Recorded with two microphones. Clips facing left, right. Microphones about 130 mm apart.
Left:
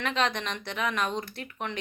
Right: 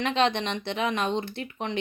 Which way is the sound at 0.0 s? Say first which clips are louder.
Right 4 dB; 30° right (ahead or behind).